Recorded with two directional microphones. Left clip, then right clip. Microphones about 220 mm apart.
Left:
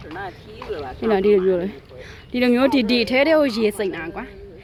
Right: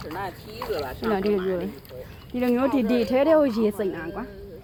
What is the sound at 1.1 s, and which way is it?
A woman's voice, 35° left (ahead or behind).